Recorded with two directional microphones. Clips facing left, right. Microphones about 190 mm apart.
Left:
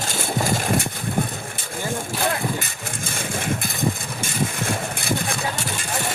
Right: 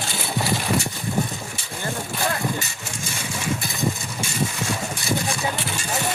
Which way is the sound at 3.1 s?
55° left (ahead or behind).